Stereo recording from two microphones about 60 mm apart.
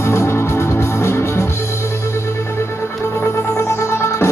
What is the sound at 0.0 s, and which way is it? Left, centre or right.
Music, left.